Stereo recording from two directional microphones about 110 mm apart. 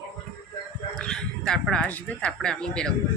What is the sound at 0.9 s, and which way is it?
Bow-wow, 5° left (ahead or behind).